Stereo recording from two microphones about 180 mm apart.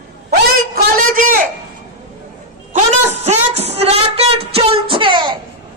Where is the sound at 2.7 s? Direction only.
40° right (ahead or behind).